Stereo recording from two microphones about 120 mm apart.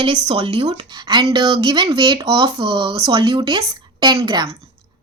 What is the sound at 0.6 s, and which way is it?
Speech, 35° right (ahead or behind).